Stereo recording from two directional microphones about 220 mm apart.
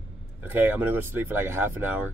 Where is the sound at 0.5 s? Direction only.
10° right (ahead or behind).